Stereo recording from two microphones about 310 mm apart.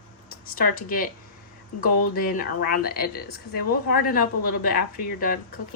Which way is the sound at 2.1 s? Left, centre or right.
Left.